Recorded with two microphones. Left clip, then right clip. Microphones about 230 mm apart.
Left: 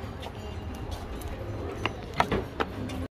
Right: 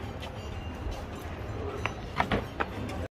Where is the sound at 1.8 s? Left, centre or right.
Left.